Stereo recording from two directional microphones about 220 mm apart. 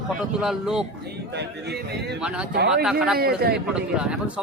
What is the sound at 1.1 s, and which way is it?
Speech, 50° right (ahead or behind).